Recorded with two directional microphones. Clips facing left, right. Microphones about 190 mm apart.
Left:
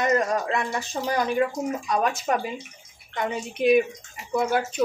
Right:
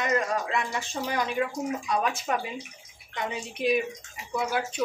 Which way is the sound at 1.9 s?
45° left (ahead or behind).